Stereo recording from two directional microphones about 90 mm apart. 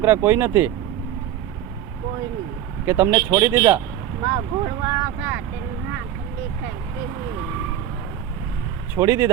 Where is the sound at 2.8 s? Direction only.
25° right (ahead or behind).